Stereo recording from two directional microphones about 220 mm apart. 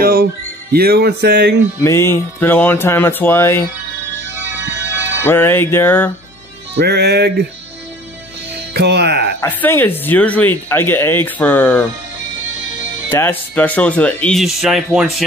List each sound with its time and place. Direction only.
0.0 s music: 40° right (ahead or behind)
1.8 s speech: 10° left (ahead or behind)
4.3 s music: 10° right (ahead or behind)
5.2 s speech: 10° left (ahead or behind)
6.8 s music: 50° right (ahead or behind)
8.7 s music: 50° right (ahead or behind)
9.4 s speech: 10° left (ahead or behind)
13.1 s speech: 10° left (ahead or behind)